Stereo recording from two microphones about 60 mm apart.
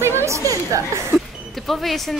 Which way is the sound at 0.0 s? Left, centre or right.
Right.